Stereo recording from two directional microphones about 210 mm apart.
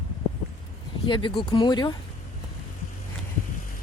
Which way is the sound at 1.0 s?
25° left (ahead or behind).